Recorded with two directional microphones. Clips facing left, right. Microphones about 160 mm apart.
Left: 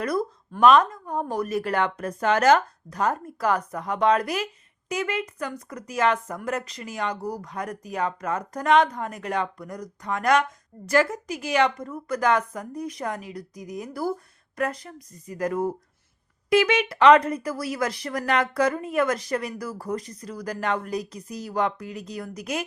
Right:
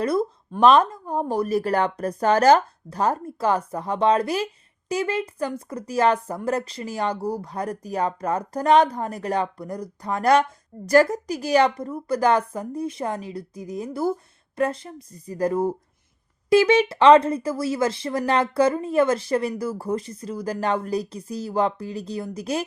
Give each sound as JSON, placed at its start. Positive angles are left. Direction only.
{"t": 0.0, "sound": "speech", "side_deg": -25}